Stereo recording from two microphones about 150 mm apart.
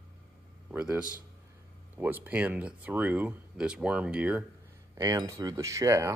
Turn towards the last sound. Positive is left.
turn(degrees=-20)  # may be behind; listen again after turning